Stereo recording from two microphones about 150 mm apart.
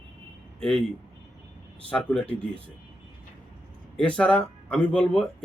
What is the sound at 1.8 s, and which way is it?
Speech, 5° left (ahead or behind).